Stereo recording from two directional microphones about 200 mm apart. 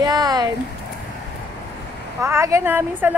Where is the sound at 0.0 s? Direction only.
20° right (ahead or behind).